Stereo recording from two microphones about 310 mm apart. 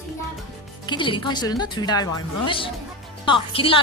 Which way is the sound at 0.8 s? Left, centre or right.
Centre.